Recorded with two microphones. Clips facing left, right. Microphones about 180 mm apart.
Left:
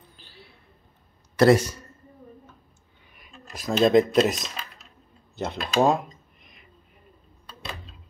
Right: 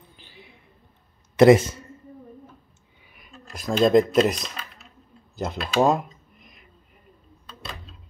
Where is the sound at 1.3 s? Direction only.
20° right (ahead or behind).